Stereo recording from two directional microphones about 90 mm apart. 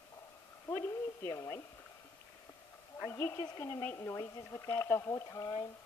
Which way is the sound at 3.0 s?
30° left (ahead or behind).